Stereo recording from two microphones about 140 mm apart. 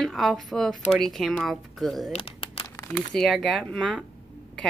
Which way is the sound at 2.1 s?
40° left (ahead or behind).